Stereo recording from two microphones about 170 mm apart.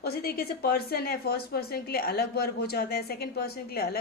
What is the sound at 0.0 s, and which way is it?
A woman's voice, 65° left (ahead or behind).